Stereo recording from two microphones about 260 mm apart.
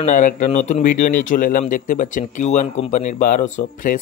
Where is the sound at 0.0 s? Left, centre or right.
Left.